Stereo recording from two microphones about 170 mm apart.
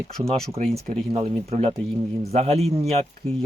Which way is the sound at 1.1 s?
40° right (ahead or behind).